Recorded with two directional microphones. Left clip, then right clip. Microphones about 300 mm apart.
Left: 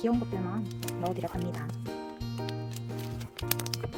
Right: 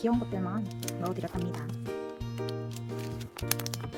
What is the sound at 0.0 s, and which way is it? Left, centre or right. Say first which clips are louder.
Speech: even; centre.